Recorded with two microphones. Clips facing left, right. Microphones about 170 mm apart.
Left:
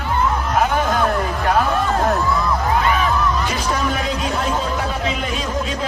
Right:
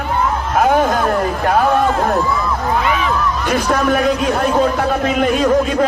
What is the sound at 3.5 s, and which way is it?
Music, 55° right (ahead or behind).